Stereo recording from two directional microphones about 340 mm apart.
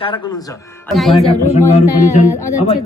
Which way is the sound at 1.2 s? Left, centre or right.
Centre.